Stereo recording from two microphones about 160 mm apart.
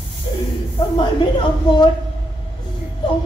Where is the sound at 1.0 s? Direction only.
30° left (ahead or behind).